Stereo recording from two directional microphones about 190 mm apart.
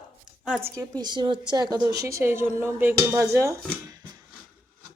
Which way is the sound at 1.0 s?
25° right (ahead or behind).